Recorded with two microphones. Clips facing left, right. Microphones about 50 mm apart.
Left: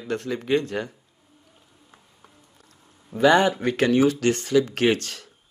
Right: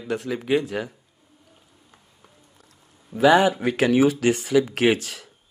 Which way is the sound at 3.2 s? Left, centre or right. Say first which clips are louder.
Right 1 dB; centre.